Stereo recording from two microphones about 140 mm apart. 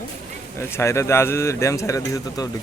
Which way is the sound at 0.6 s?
20° left (ahead or behind).